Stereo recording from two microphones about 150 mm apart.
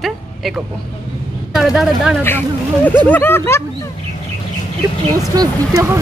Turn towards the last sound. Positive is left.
turn(degrees=-20)  # may be behind; listen again after turning